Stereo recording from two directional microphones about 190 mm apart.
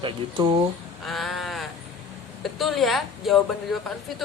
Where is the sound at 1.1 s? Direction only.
Centre (ahead or behind).